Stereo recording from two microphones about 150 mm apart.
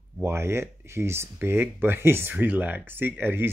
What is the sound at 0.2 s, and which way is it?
Speech, 15° right (ahead or behind).